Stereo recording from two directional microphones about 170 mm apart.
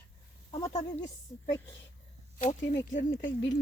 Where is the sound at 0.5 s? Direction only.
25° left (ahead or behind).